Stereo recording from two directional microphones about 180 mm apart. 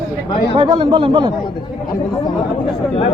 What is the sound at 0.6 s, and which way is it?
Speech, 30° right (ahead or behind).